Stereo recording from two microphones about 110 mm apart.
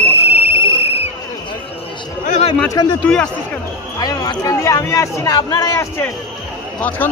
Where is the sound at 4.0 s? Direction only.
35° left (ahead or behind).